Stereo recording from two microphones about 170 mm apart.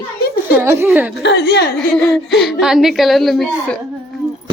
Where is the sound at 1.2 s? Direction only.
90° left; by 1.7 s 75° left (ahead or behind).